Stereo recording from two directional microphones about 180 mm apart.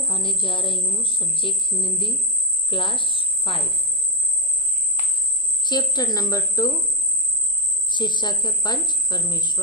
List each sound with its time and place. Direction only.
0.0 s a woman's voice: 30° left (ahead or behind)
5.6 s a woman's voice: 25° left (ahead or behind)
7.9 s a woman's voice: 25° left (ahead or behind)